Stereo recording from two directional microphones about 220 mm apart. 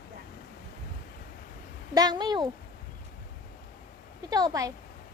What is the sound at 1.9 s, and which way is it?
Speech, 20° right (ahead or behind).